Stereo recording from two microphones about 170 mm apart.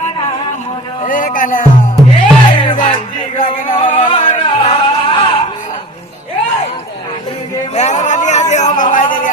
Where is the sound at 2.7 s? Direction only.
50° left (ahead or behind).